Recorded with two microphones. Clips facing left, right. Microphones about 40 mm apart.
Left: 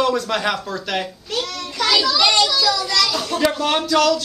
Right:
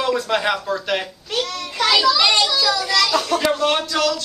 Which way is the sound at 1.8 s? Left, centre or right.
Centre.